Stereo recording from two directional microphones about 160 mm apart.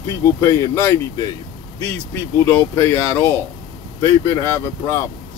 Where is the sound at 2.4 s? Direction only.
15° left (ahead or behind).